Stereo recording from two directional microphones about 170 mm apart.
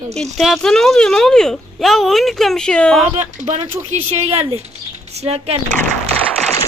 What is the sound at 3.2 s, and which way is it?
A woman's voice, 45° right (ahead or behind).